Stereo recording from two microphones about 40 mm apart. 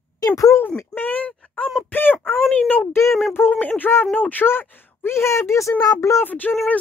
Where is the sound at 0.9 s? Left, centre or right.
Left.